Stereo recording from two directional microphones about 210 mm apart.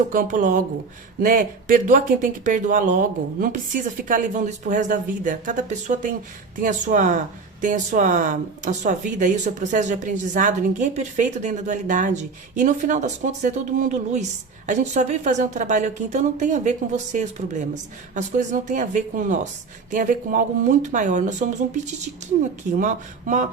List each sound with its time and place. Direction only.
0.1 s speech: 40° right (ahead or behind)
22.8 s speech: 35° right (ahead or behind)